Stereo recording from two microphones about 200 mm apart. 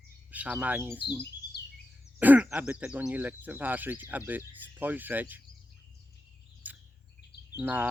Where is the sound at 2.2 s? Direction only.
10° right (ahead or behind).